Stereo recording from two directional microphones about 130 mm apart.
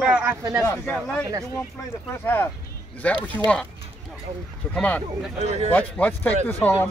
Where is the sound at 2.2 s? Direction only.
15° left (ahead or behind).